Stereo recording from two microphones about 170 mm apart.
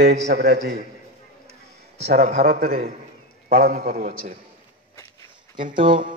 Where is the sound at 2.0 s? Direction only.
60° right (ahead or behind).